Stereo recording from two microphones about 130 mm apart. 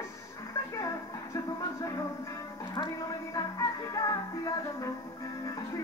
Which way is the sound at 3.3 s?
25° left (ahead or behind).